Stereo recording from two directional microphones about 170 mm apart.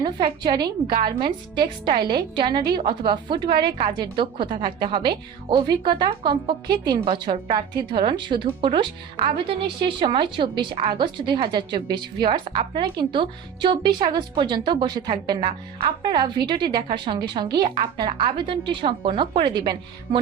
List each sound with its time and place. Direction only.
0.0 s a woman's voice: 25° right (ahead or behind)